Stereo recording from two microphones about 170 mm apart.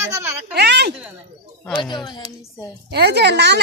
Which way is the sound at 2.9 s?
75° right (ahead or behind).